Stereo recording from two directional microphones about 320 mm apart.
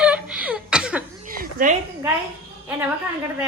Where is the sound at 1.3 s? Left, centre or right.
Right.